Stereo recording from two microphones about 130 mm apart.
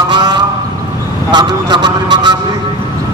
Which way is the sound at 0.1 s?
35° right (ahead or behind).